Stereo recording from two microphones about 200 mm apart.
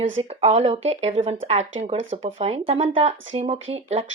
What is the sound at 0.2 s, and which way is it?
Speech, 30° right (ahead or behind).